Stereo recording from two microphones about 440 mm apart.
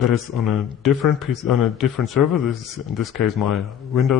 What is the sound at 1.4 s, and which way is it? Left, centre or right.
Speech, left.